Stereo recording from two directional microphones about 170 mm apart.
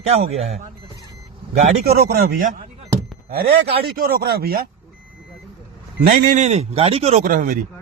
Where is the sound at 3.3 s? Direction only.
65° right (ahead or behind).